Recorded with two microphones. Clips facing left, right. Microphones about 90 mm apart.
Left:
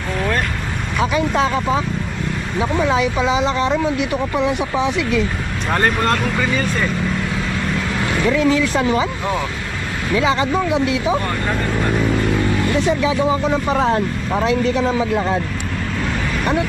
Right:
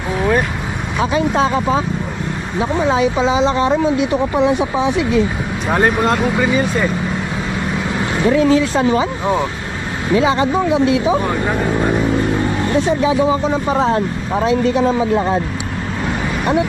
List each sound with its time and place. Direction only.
0.2 s vehicle: 5° right (ahead or behind)
1.3 s speech: 20° right (ahead or behind)
5.6 s speech: 5° right (ahead or behind)
7.7 s vehicle: 15° right (ahead or behind)
9.2 s speech: 15° right (ahead or behind)
11.2 s speech: 10° right (ahead or behind)
12.5 s speech: 25° right (ahead or behind)